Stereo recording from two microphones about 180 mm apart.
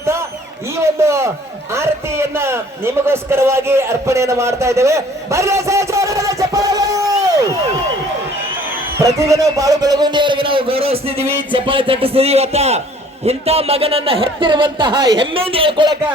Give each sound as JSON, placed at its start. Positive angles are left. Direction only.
{"t": 0.8, "sound": "a man's voice", "side_deg": -15}
{"t": 9.0, "sound": "a man's voice", "side_deg": -15}